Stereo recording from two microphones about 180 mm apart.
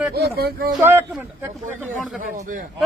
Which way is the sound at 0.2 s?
60° right (ahead or behind).